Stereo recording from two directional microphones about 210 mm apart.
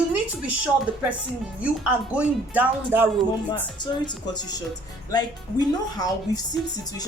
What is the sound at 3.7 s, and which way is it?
A man's voice, 20° left (ahead or behind).